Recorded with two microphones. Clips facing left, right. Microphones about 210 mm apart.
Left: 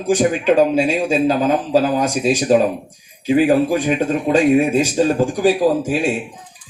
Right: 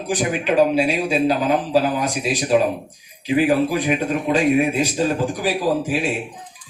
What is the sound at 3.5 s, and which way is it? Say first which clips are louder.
Speech: left 3 dB; 45° left (ahead or behind).